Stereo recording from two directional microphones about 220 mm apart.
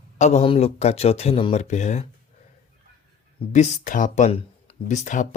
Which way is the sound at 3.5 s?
35° left (ahead or behind).